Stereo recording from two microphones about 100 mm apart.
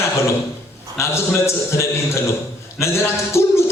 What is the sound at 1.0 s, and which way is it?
A man's voice, 30° left (ahead or behind).